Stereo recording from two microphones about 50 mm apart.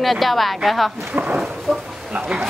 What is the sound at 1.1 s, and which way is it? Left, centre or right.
Chicken, right.